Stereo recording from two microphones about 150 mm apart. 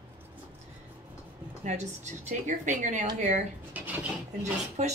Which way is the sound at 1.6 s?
50° right (ahead or behind).